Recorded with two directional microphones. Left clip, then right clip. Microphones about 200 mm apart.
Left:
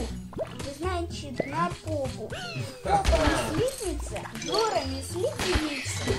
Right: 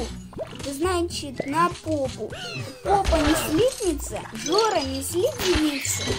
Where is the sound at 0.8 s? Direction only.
60° right (ahead or behind).